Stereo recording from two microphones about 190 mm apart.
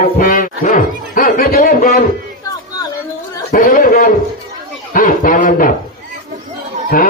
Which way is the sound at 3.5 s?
45° left (ahead or behind).